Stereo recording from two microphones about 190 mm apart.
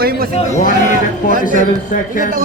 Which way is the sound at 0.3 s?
35° left (ahead or behind).